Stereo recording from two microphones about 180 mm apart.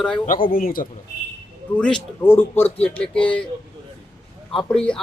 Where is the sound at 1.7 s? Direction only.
5° left (ahead or behind).